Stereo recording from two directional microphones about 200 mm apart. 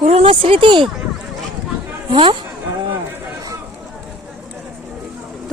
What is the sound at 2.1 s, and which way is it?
Speech, 25° right (ahead or behind).